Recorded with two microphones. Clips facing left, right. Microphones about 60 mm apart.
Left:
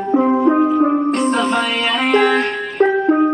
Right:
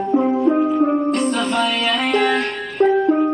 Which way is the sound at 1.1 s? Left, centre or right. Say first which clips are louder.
Left 3 dB; left.